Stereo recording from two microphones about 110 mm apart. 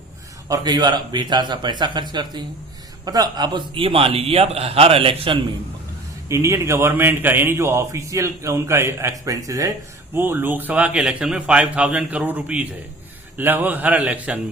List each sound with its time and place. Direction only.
0.4 s a man's voice: 35° right (ahead or behind); by 5.4 s 55° right (ahead or behind)
6.2 s a man's voice: 25° right (ahead or behind)
10.2 s speech: 20° right (ahead or behind)